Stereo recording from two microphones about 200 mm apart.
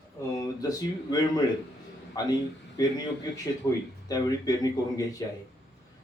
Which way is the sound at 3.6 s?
15° left (ahead or behind).